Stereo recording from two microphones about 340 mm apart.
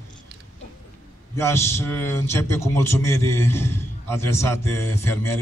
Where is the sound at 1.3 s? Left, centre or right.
Centre.